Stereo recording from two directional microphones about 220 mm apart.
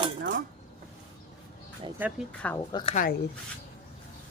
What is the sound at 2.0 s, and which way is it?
Speech, 5° right (ahead or behind).